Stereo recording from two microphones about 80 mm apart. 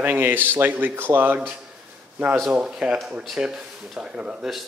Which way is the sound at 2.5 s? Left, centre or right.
Centre.